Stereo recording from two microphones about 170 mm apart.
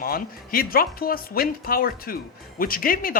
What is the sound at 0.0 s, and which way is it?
A woman's voice, 60° left (ahead or behind).